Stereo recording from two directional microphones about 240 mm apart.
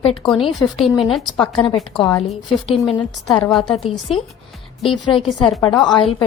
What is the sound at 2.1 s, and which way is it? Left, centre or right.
Speech, left.